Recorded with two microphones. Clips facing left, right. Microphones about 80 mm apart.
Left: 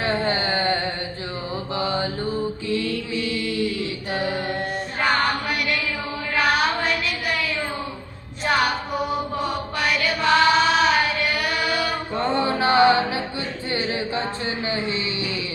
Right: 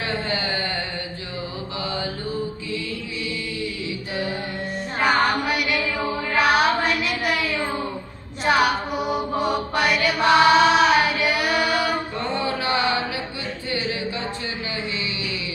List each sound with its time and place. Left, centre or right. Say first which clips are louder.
0.0 s a sound: left 3 dB; left
1.8 s mantra: left 4 dB; left
4.9 s music: right 2 dB; centre
6.3 s child singing: right 2 dB; centre
8.4 s mantra: right 2 dB; centre
9.8 s music: even; centre
10.2 s choir: right 3 dB; centre
12.1 s music: left 3 dB; left
13.7 s singing: left 1 dB; left
14.7 s a sound: left 5 dB; left